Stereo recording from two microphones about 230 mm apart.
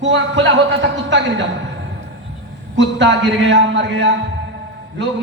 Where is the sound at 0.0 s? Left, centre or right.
Right.